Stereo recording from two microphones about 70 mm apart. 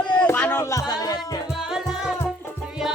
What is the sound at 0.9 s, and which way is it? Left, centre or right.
Music, left.